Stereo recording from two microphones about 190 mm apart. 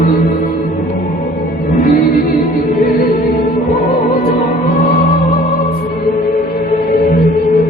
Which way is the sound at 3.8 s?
45° left (ahead or behind).